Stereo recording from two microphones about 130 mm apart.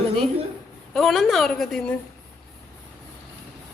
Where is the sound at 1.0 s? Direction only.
Centre (ahead or behind).